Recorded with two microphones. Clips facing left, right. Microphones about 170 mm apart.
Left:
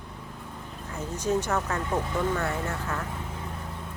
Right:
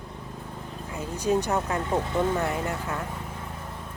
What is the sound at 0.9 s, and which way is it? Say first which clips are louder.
Speech: right 2 dB; 10° right (ahead or behind).